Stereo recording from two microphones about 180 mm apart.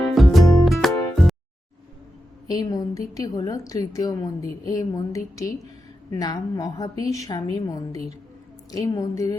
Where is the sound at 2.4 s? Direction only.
20° left (ahead or behind).